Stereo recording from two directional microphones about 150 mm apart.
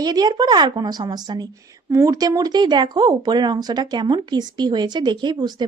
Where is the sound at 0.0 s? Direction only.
25° right (ahead or behind).